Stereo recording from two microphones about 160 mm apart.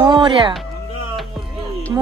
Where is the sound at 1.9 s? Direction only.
20° right (ahead or behind).